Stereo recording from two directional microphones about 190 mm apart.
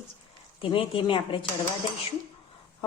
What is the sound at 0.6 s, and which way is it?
Speech, 25° left (ahead or behind).